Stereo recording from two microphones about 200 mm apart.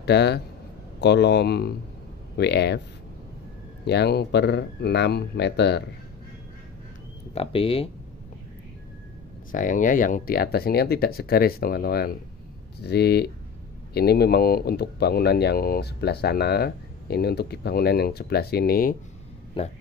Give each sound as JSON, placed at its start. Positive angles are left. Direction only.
{"t": 0.0, "sound": "speech", "side_deg": 55}
{"t": 3.8, "sound": "speech", "side_deg": 55}
{"t": 7.3, "sound": "speech", "side_deg": 30}
{"t": 9.5, "sound": "speech", "side_deg": 40}